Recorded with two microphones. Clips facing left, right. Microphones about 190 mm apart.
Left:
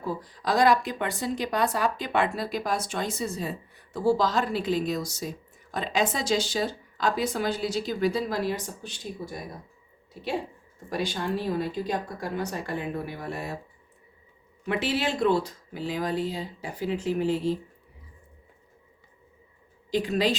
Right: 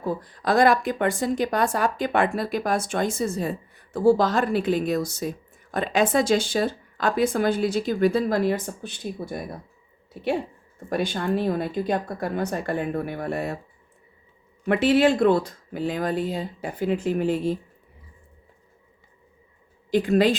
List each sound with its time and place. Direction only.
0.0 s speech: 55° right (ahead or behind)
10.8 s speech: 55° right (ahead or behind)
14.7 s speech: 55° right (ahead or behind)
19.9 s speech: 55° right (ahead or behind)